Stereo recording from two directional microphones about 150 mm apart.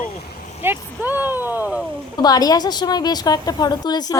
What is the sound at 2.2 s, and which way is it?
A woman's voice, 25° left (ahead or behind).